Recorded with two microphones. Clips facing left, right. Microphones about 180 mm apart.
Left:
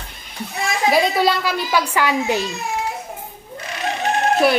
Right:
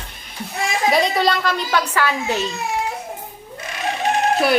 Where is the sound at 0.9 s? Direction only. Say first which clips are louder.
Left 1 dB; 5° left (ahead or behind).